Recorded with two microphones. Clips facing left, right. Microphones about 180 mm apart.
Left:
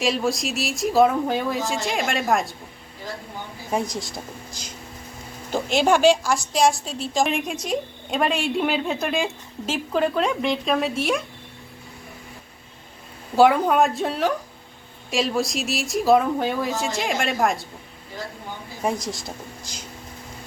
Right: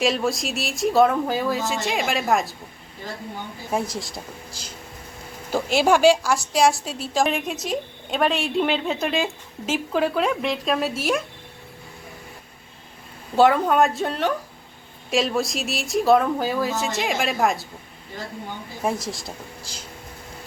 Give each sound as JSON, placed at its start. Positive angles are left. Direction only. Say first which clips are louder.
{"t": 0.0, "sound": "a woman's voice", "louder": "right 1 dB", "side_deg": 0}
{"t": 3.7, "sound": "a woman's voice", "louder": "left 1 dB", "side_deg": -5}
{"t": 5.5, "sound": "a woman's voice", "louder": "right 1 dB", "side_deg": -5}
{"t": 13.3, "sound": "a woman's voice", "louder": "left 1 dB", "side_deg": 0}
{"t": 18.8, "sound": "a woman's voice", "louder": "even", "side_deg": -5}